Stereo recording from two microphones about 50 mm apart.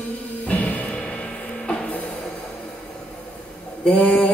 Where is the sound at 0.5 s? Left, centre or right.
Left.